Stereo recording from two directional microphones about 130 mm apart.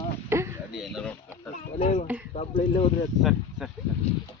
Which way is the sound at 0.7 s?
Centre (ahead or behind).